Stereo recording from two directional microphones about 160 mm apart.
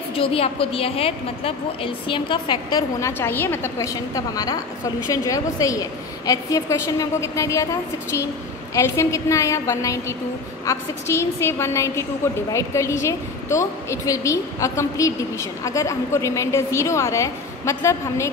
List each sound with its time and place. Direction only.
0.1 s a woman's voice: 35° left (ahead or behind)
3.0 s a woman's voice: 15° left (ahead or behind)
8.7 s a woman's voice: 20° left (ahead or behind)